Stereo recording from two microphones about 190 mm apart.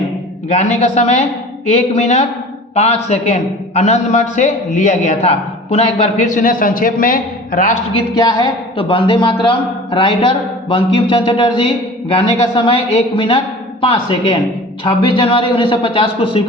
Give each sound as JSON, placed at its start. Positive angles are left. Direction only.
{"t": 0.5, "sound": "a man's voice", "side_deg": 35}
{"t": 7.9, "sound": "a man's voice", "side_deg": 25}